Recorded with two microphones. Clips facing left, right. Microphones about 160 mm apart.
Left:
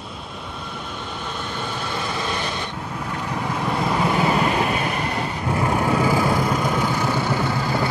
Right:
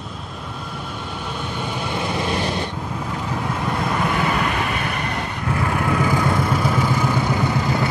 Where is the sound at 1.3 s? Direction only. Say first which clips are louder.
Right 2 dB; 10° right (ahead or behind).